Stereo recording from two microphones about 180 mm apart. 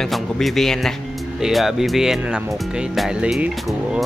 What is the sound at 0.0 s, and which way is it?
Speech, centre (ahead or behind).